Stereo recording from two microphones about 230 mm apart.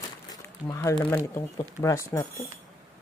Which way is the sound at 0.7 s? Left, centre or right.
Centre.